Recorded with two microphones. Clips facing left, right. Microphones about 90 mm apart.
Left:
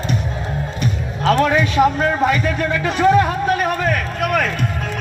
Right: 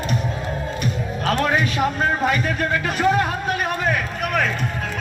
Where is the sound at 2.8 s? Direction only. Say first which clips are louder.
Left 7 dB; 35° left (ahead or behind).